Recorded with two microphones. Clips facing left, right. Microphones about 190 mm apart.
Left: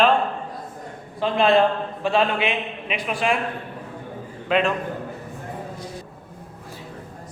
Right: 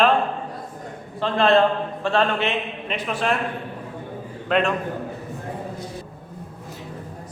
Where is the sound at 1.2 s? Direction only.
15° left (ahead or behind).